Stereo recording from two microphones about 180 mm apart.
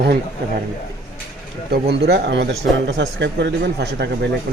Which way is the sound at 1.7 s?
65° right (ahead or behind).